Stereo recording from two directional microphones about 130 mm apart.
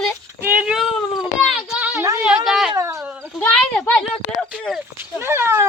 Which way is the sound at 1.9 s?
25° right (ahead or behind).